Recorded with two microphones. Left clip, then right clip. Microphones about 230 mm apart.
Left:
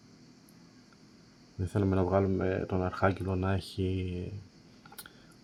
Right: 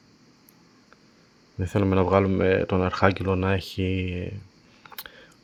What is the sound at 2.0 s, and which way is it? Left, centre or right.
Speech, right.